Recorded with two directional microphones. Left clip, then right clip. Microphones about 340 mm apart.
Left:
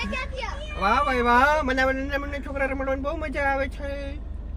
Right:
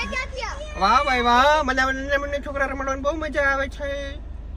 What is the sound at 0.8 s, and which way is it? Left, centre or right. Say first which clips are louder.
A man's voice: right 3 dB; centre.